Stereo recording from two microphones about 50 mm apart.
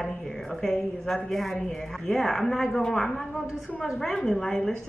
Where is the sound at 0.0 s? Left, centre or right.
Centre.